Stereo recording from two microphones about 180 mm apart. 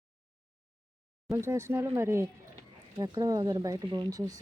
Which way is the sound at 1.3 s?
15° right (ahead or behind).